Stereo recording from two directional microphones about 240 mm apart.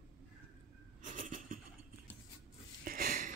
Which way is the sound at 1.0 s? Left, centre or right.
Right.